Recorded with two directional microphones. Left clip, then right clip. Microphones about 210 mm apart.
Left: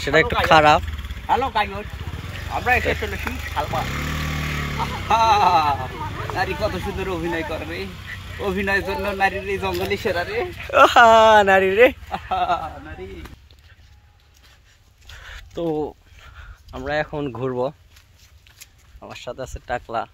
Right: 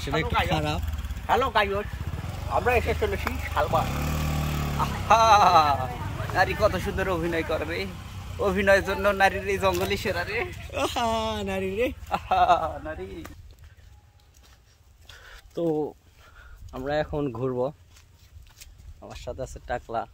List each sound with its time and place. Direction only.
0.0 s speech: 5° right (ahead or behind)
1.2 s speech: 15° right (ahead or behind)
2.5 s speech: 50° right (ahead or behind)
3.3 s speech: 30° right (ahead or behind)
3.8 s vehicle: 55° right (ahead or behind)
5.0 s speech: 20° right (ahead or behind)
10.1 s speech: 45° left (ahead or behind)
10.6 s speech: centre (ahead or behind)
12.1 s speech: 25° right (ahead or behind)
15.0 s a sound: centre (ahead or behind)
16.9 s speech: 5° right (ahead or behind)
18.6 s a sound: 15° right (ahead or behind)
18.9 s speech: 15° left (ahead or behind)